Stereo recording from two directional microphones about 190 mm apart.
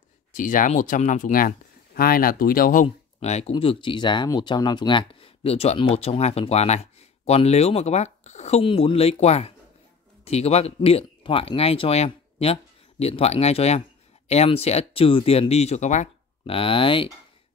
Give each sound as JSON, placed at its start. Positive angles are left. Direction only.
{"t": 0.3, "sound": "speech", "side_deg": 45}